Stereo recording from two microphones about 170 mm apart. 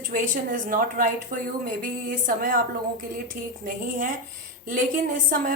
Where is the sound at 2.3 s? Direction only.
55° right (ahead or behind).